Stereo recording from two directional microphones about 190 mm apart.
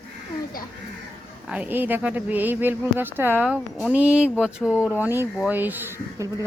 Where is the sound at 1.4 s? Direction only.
5° right (ahead or behind).